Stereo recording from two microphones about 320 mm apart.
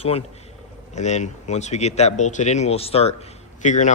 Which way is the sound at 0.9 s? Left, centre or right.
Left.